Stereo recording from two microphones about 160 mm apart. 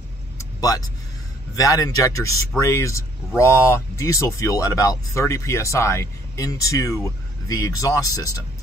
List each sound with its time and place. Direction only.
0.4 s vehicle: 20° left (ahead or behind)
1.5 s speech: 20° left (ahead or behind)